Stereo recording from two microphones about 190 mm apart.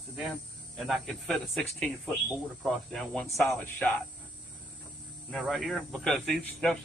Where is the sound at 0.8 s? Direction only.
Centre (ahead or behind).